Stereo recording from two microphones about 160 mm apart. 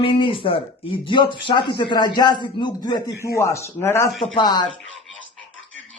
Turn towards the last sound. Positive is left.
turn(degrees=25)  # may be behind; listen again after turning